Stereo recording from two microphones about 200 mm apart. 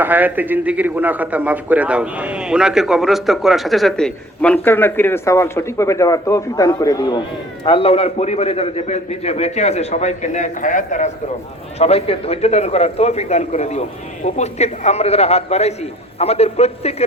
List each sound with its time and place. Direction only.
0.0 s a man's voice: 10° right (ahead or behind); by 16.9 s 30° left (ahead or behind)